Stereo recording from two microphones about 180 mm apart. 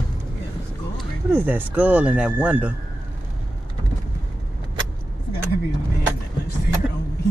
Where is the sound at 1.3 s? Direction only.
10° right (ahead or behind).